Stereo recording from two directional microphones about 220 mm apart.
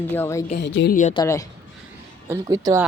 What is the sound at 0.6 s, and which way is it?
Speech, 50° left (ahead or behind).